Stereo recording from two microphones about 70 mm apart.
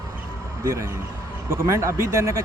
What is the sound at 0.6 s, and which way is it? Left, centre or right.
Speech, right.